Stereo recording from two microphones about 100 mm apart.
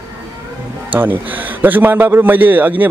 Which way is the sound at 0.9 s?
20° right (ahead or behind).